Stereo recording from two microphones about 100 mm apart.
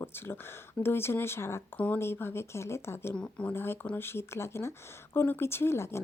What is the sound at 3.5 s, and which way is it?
A woman's voice, 25° left (ahead or behind).